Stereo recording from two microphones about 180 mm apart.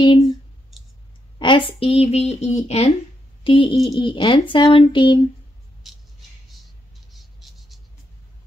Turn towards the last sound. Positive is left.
turn(degrees=0)  # may be behind; listen again after turning